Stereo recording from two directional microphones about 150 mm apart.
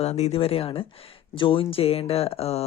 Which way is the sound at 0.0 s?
45° left (ahead or behind).